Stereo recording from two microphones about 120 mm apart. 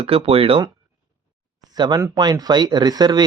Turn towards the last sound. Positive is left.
turn(degrees=-35)  # may be behind; listen again after turning